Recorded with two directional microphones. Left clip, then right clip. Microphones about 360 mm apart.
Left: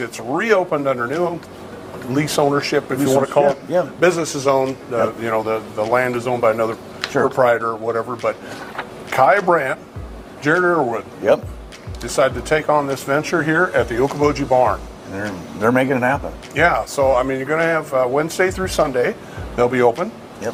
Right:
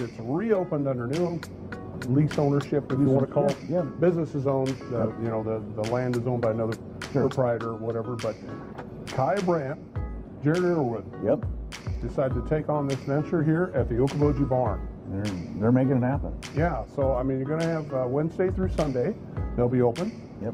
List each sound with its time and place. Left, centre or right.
0.3 s a man's voice: centre
2.3 s a man's voice: centre
2.6 s a man's voice: centre